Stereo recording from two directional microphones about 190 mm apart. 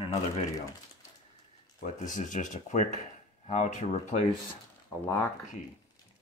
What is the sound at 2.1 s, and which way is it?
Speech, 45° left (ahead or behind).